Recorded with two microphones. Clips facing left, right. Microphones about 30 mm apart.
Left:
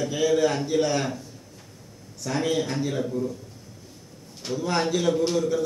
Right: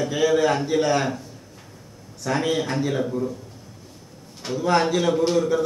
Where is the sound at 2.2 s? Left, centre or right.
Centre.